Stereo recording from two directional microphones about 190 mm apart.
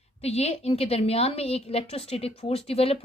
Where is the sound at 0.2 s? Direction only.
35° left (ahead or behind).